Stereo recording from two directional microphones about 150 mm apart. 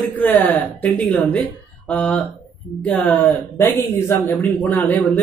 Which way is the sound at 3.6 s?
20° left (ahead or behind).